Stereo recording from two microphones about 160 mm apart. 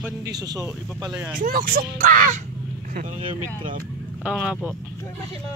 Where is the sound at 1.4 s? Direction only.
65° right (ahead or behind).